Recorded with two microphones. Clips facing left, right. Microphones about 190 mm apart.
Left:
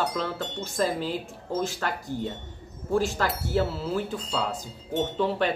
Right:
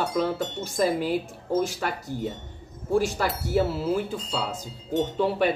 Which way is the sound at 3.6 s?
Centre (ahead or behind).